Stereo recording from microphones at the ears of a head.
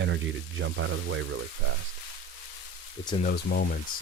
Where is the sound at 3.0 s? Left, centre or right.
Left.